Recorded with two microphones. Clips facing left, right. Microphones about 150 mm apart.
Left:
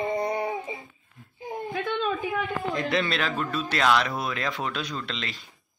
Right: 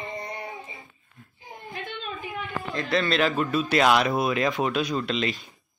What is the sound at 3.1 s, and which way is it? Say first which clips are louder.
Speech: right 5 dB; 5° right (ahead or behind).